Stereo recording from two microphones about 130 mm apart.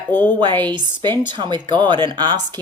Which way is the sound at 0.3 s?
35° right (ahead or behind).